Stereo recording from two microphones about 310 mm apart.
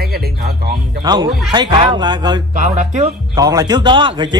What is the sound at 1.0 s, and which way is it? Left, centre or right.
Speech, centre.